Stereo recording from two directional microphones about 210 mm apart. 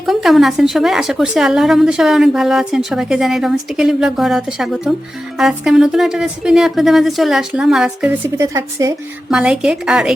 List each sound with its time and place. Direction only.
0.0 s a woman's voice: centre (ahead or behind)
8.4 s a woman's voice: 15° right (ahead or behind)
9.3 s a woman's voice: 5° right (ahead or behind)